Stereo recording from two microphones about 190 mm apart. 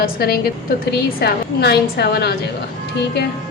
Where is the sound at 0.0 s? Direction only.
50° left (ahead or behind).